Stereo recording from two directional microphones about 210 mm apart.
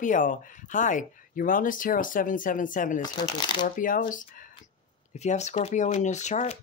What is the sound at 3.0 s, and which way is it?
Speech, 20° left (ahead or behind).